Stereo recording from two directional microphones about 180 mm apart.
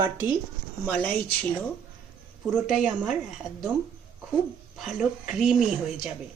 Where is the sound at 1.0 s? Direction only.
10° left (ahead or behind).